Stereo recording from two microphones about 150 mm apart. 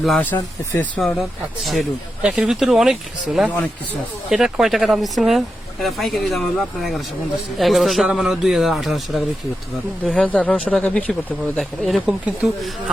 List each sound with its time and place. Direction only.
0.0 s speech: centre (ahead or behind)
0.3 s speech: 15° left (ahead or behind)
0.9 s speech: centre (ahead or behind)